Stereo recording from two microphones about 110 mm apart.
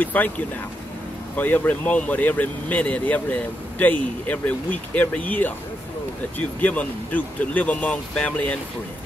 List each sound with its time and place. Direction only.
0.0 s speech: 15° left (ahead or behind)
1.3 s speech: 15° left (ahead or behind)